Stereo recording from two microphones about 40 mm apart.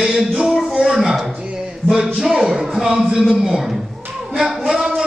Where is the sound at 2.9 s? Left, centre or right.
Right.